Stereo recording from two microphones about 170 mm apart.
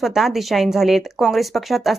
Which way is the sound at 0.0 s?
Centre (ahead or behind).